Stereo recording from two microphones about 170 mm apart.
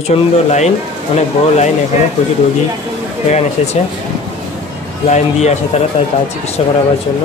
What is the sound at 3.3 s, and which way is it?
Speech, 40° left (ahead or behind).